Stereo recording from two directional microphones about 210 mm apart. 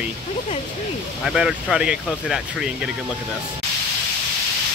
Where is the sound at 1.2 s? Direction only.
Centre (ahead or behind).